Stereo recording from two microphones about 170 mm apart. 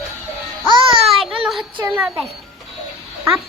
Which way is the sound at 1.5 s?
5° right (ahead or behind).